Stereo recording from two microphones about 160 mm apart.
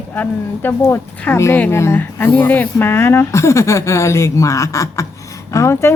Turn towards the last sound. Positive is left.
turn(degrees=15)  # may be behind; listen again after turning